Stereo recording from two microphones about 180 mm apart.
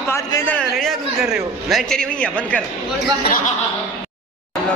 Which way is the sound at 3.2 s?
55° left (ahead or behind).